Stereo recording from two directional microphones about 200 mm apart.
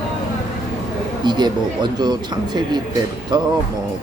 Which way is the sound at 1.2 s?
20° right (ahead or behind).